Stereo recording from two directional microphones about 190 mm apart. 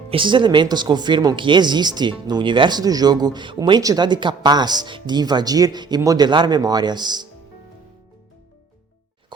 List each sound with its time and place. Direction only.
0.1 s speech: 25° right (ahead or behind)